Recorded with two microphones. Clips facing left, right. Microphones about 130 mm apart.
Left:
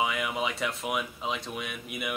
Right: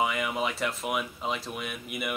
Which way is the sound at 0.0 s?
Centre (ahead or behind).